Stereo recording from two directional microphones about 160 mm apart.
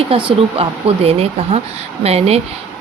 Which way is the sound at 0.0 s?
35° right (ahead or behind).